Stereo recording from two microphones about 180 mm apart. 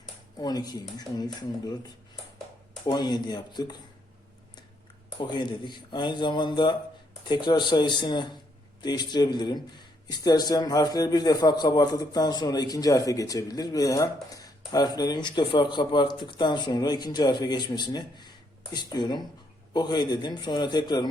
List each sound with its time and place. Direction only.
0.3 s a man's voice: 20° left (ahead or behind)
5.2 s a man's voice: 25° left (ahead or behind)